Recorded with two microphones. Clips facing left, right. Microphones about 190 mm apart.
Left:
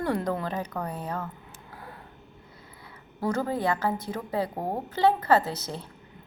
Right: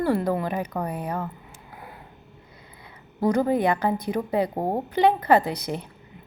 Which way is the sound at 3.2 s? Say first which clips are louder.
Right 6 dB; 15° right (ahead or behind).